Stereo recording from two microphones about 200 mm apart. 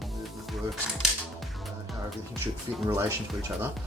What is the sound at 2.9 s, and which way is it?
Speech, 15° right (ahead or behind).